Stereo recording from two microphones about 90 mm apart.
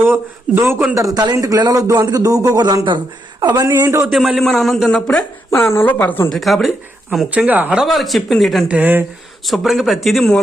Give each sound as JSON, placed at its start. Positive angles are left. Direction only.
{"t": 0.0, "sound": "a man's voice", "side_deg": -25}
{"t": 0.9, "sound": "a man's voice", "side_deg": -40}
{"t": 3.8, "sound": "a man's voice", "side_deg": -30}
{"t": 4.1, "sound": "a man's voice", "side_deg": 0}
{"t": 5.5, "sound": "speech", "side_deg": 25}
{"t": 6.3, "sound": "a man's voice", "side_deg": 0}
{"t": 7.3, "sound": "speech", "side_deg": -15}
{"t": 7.8, "sound": "a man's voice", "side_deg": 0}
{"t": 8.6, "sound": "a man's voice", "side_deg": -15}
{"t": 9.5, "sound": "a man's voice", "side_deg": 0}